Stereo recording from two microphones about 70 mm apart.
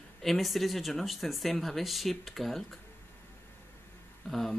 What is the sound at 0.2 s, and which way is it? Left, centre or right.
Speech, centre.